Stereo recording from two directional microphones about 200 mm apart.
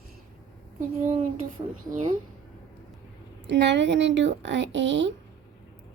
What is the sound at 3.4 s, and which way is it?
A woman's voice, 60° right (ahead or behind).